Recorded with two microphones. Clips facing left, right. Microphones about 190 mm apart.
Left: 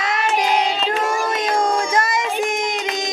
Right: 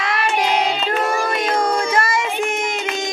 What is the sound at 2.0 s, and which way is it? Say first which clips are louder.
Child singing: even; 20° left (ahead or behind).